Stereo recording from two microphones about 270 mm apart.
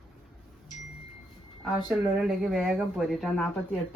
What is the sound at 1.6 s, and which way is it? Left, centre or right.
Speech, centre.